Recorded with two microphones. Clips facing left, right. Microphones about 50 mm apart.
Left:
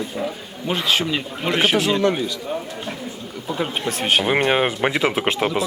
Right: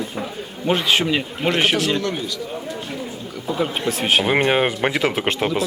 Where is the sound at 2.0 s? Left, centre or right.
Left.